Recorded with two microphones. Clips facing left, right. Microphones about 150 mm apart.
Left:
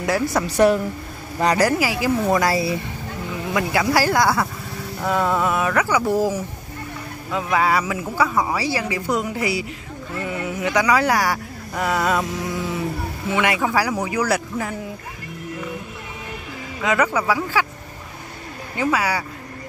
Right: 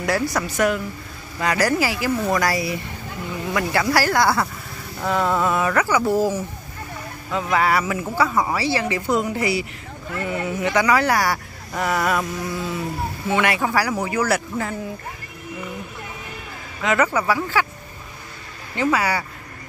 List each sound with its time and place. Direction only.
0.0 s speech: 20° left (ahead or behind)
0.5 s a woman's voice: 35° left (ahead or behind)
1.5 s speech: 15° left (ahead or behind)
16.9 s speech: 5° left (ahead or behind)
18.8 s speech: 10° left (ahead or behind)